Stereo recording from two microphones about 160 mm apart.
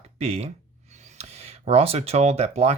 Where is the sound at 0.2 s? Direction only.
40° right (ahead or behind).